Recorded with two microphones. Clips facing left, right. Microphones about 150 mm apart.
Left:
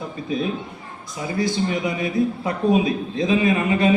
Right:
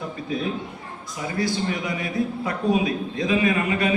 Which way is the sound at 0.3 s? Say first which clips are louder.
Left 3 dB; 20° left (ahead or behind).